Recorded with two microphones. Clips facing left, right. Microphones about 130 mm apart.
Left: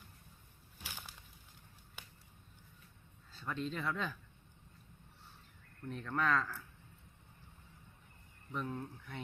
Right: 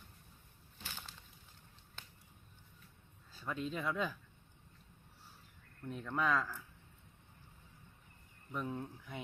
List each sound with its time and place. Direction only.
0.8 s a sound: 10° left (ahead or behind)
3.3 s speech: 10° right (ahead or behind)
5.9 s speech: 5° right (ahead or behind)
8.5 s speech: 5° right (ahead or behind)